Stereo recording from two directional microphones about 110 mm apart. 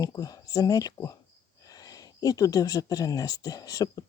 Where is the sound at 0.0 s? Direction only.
35° left (ahead or behind).